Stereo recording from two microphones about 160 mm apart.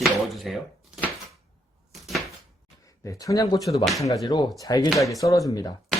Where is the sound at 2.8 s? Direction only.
20° left (ahead or behind).